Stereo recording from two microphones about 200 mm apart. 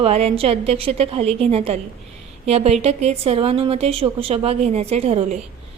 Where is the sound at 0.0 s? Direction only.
30° right (ahead or behind).